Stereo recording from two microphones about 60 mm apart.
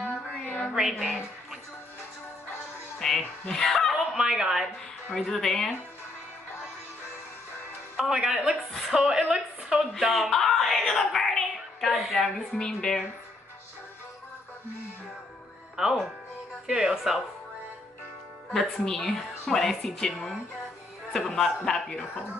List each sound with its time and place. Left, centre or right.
0.1 s a sound: left
3.0 s speech: centre
4.2 s speech: centre
5.1 s a woman's voice: centre
8.1 s speech: centre
9.9 s a sound: centre
12.5 s a woman's voice: centre
15.7 s speech: centre
18.9 s a woman's voice: centre